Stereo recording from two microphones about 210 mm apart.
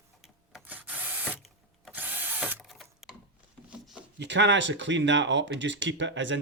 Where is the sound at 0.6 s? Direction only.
10° right (ahead or behind).